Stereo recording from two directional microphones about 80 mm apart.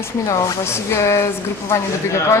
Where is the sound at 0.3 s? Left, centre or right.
Left.